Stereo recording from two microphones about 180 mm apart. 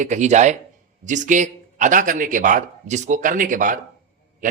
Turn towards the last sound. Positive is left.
turn(degrees=-45)  # may be behind; listen again after turning